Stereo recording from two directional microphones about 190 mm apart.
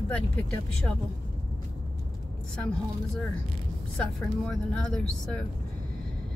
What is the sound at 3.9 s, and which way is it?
Speech, 5° left (ahead or behind).